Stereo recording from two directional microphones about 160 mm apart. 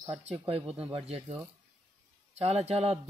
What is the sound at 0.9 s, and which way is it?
Speech, 35° right (ahead or behind).